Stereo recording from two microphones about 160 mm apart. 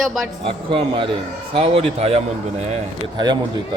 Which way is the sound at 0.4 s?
35° right (ahead or behind).